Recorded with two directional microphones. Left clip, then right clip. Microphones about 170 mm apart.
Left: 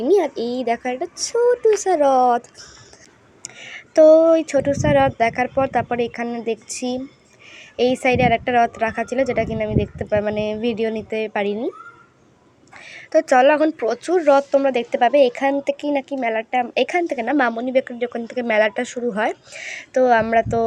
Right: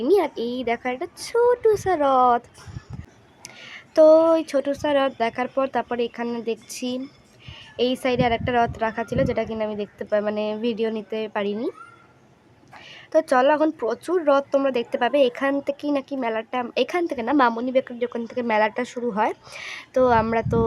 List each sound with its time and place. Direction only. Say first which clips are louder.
0.0 s speech: left 3 dB; 15° left (ahead or behind)
3.4 s speech: left 4 dB; 5° left (ahead or behind)
12.9 s speech: left 4 dB; 5° left (ahead or behind)